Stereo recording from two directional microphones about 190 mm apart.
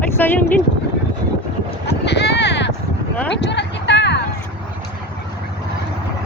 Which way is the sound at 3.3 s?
65° left (ahead or behind).